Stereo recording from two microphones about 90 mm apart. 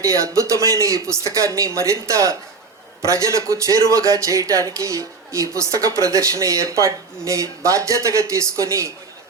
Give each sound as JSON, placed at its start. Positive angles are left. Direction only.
{"t": 0.0, "sound": "speech", "side_deg": -40}